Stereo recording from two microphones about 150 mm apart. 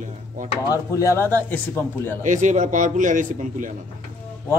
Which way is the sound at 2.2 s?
55° right (ahead or behind).